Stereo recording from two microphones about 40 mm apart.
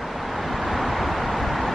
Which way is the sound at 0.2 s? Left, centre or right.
Centre.